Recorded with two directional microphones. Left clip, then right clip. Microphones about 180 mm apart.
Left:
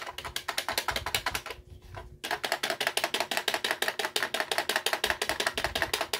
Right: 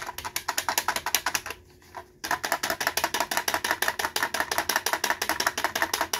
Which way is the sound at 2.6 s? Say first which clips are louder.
Right 2 dB; 20° left (ahead or behind).